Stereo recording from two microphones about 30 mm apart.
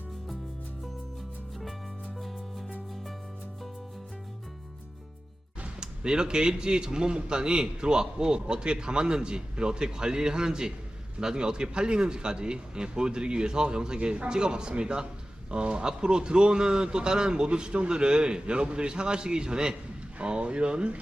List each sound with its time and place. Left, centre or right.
2.1 s music: centre
5.8 s a man's voice: right
20.1 s a man's voice: right